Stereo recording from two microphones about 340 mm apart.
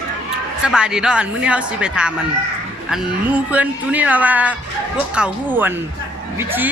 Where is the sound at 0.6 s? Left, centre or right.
Centre.